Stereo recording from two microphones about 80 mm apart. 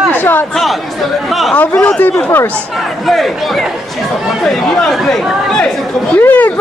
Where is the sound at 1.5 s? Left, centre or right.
Centre.